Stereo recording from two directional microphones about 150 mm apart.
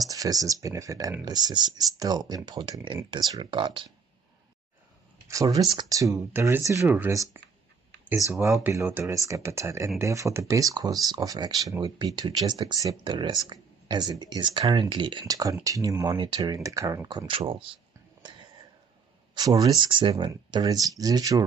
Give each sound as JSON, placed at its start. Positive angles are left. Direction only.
{"t": 0.0, "sound": "speech", "side_deg": -25}
{"t": 5.3, "sound": "speech", "side_deg": -25}
{"t": 8.6, "sound": "speech", "side_deg": -15}
{"t": 17.3, "sound": "speech", "side_deg": -35}
{"t": 19.3, "sound": "speech", "side_deg": -25}